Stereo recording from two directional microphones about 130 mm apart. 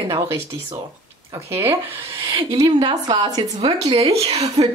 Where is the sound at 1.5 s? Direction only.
20° right (ahead or behind).